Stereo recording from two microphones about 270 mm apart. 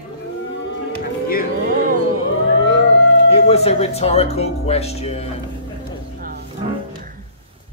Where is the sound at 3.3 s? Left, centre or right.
Left.